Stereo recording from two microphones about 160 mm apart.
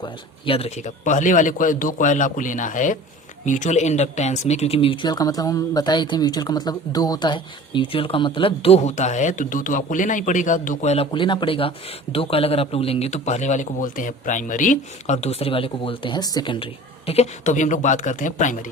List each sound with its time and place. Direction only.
0.0 s speech: 35° left (ahead or behind); by 10.9 s 55° left (ahead or behind)
10.9 s speech: 35° left (ahead or behind)
17.1 s speech: 45° left (ahead or behind)